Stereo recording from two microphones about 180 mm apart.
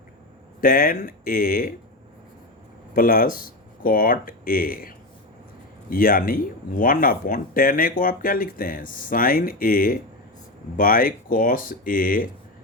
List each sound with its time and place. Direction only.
0.6 s speech: 55° left (ahead or behind)
2.9 s speech: 55° left (ahead or behind)